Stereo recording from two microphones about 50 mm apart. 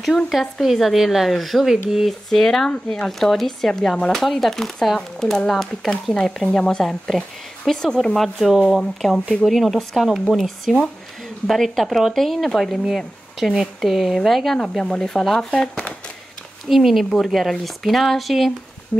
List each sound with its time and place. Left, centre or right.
0.0 s speech: centre
6.5 s speech: centre
13.7 s speech: centre
16.6 s speech: centre